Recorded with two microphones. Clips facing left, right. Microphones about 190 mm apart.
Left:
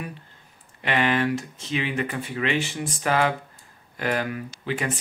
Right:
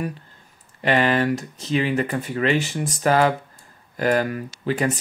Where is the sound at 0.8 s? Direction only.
40° right (ahead or behind).